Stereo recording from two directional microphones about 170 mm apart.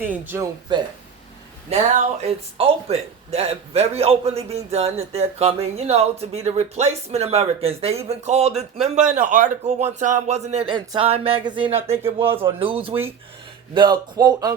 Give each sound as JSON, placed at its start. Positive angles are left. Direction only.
{"t": 0.0, "sound": "speech", "side_deg": -10}
{"t": 0.7, "sound": "speech", "side_deg": -25}
{"t": 1.7, "sound": "speech", "side_deg": -40}